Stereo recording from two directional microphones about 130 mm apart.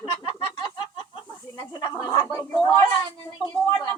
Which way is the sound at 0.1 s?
45° left (ahead or behind).